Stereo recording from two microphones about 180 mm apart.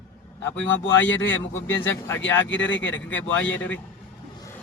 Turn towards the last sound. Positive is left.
turn(degrees=10)  # may be behind; listen again after turning